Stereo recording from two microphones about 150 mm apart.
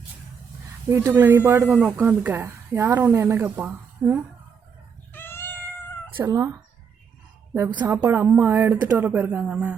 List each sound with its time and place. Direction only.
0.9 s speech: 15° right (ahead or behind)
5.1 s cat: 15° left (ahead or behind)
6.1 s speech: 25° right (ahead or behind)
7.9 s speech: 15° right (ahead or behind)